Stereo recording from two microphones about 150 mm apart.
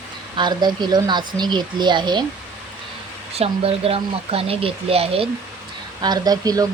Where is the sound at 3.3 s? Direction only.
40° right (ahead or behind).